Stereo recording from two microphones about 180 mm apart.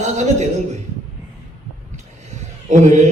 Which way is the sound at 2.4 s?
40° right (ahead or behind).